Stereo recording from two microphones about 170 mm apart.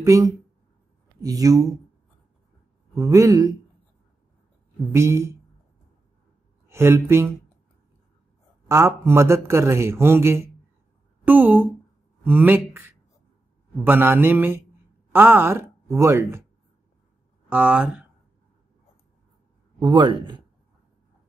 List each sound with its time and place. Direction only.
0.0 s speech: 20° right (ahead or behind)
2.9 s speech: 20° right (ahead or behind)
4.9 s a man's voice: 15° right (ahead or behind)
6.7 s speech: 15° right (ahead or behind)
8.6 s a man's voice: 15° right (ahead or behind)
17.5 s speech: 10° right (ahead or behind)
19.8 s speech: 25° right (ahead or behind)